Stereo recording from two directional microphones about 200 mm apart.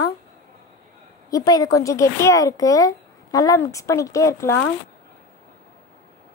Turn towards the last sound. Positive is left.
turn(degrees=15)  # may be behind; listen again after turning